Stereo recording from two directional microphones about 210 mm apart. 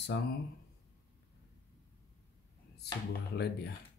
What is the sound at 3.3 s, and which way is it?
Speech, 55° left (ahead or behind).